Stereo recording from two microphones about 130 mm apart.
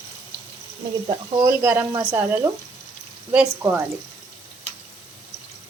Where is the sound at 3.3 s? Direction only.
15° right (ahead or behind).